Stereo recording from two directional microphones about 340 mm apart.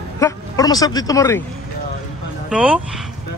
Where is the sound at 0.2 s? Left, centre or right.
Centre.